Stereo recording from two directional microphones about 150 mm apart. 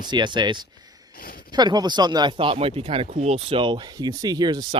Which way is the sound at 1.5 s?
30° right (ahead or behind).